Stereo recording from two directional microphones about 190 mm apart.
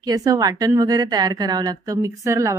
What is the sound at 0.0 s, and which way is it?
A woman's voice, 20° right (ahead or behind).